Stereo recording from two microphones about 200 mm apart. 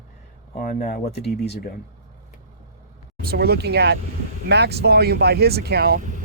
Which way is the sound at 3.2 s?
50° right (ahead or behind).